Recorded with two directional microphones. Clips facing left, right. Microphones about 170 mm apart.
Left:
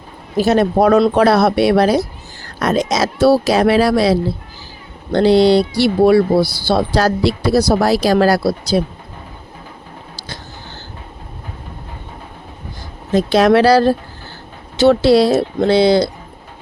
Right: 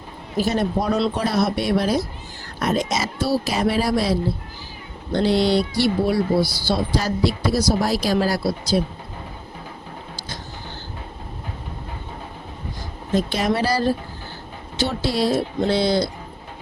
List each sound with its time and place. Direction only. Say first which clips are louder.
0.3 s speech: left 8 dB; 75° left (ahead or behind)
2.6 s speech: left 6 dB; 90° left; by 8.8 s 70° left (ahead or behind)
13.1 s speech: left 9 dB; 80° left